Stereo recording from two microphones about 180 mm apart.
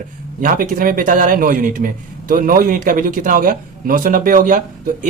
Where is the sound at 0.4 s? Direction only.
50° right (ahead or behind).